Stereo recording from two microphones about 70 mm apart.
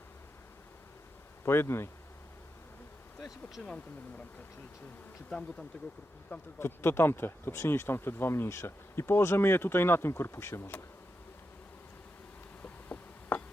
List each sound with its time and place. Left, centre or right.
1.5 s speech: left
3.2 s speech: centre
5.3 s speech: centre
6.6 s speech: left
12.6 s a sound: left